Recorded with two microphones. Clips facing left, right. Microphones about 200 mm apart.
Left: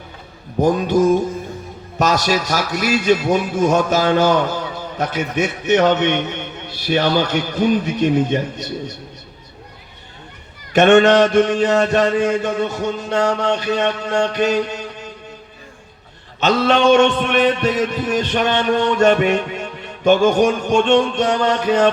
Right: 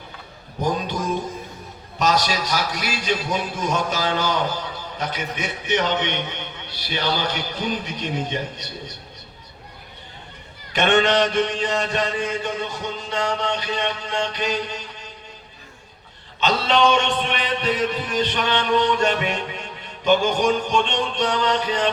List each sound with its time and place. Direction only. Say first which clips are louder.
0.6 s a man's voice: left 10 dB; 45° left (ahead or behind)
10.7 s a man's voice: left 8 dB; 45° left (ahead or behind)
16.4 s a man's voice: left 4 dB; 45° left (ahead or behind)